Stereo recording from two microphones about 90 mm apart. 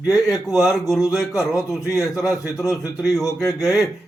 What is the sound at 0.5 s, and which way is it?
Speech, 5° right (ahead or behind).